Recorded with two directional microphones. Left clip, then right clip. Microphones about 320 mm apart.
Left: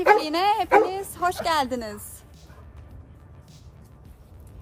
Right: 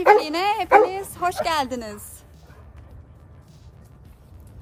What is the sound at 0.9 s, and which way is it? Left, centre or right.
A woman's voice, centre.